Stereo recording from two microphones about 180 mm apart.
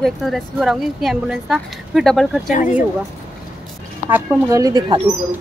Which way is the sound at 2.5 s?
45° left (ahead or behind).